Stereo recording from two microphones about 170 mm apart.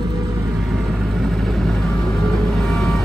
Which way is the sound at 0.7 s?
Centre (ahead or behind).